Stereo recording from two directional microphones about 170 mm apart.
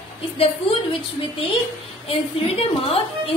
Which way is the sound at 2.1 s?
35° left (ahead or behind).